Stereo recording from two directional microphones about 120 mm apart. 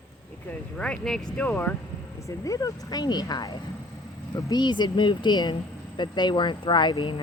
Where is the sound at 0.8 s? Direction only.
5° left (ahead or behind).